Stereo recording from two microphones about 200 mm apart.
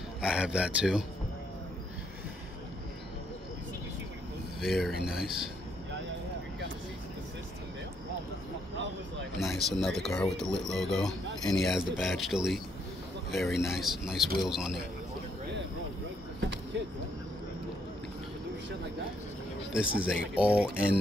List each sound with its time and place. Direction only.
0.2 s speech: 5° right (ahead or behind)
4.6 s speech: centre (ahead or behind)
9.4 s speech: centre (ahead or behind)
16.7 s a sound: 60° right (ahead or behind)
19.7 s speech: 5° right (ahead or behind)